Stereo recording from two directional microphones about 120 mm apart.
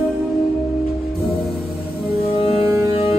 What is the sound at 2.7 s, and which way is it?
Music, 25° right (ahead or behind).